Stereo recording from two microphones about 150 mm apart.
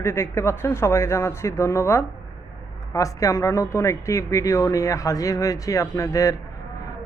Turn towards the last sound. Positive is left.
turn(degrees=20)  # may be behind; listen again after turning